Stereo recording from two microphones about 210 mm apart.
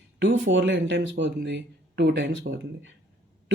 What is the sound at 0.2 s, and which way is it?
Speech, 60° right (ahead or behind).